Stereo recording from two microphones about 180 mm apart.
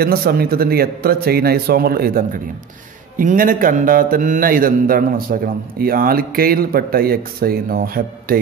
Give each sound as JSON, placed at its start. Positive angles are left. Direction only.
{"t": 0.0, "sound": "a man's voice", "side_deg": -60}